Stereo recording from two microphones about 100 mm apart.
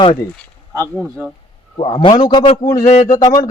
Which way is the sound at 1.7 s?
65° left (ahead or behind).